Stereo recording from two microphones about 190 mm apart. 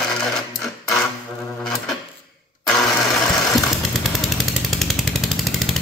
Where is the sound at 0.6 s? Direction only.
Centre (ahead or behind).